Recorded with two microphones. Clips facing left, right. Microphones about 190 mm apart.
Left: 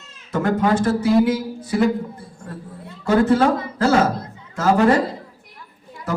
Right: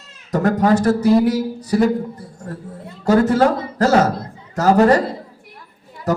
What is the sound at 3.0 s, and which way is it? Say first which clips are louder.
A man's voice: right 2 dB; 40° right (ahead or behind).